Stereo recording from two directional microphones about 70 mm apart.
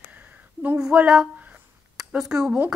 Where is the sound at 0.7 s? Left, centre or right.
Centre.